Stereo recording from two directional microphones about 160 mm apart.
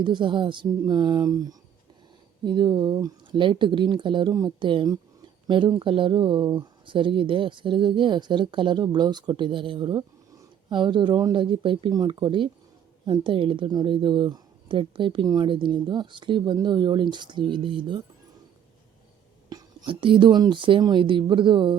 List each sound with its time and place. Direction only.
0.0 s a woman's voice: 30° right (ahead or behind)
19.5 s a woman's voice: 25° right (ahead or behind)